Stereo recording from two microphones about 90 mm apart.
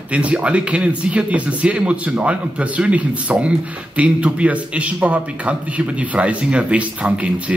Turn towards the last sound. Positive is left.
turn(degrees=-15)  # may be behind; listen again after turning